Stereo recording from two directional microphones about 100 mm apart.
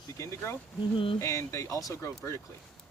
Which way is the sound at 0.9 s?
60° left (ahead or behind).